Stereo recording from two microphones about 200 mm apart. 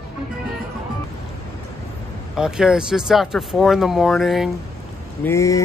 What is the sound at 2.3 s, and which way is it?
Speech, 5° right (ahead or behind).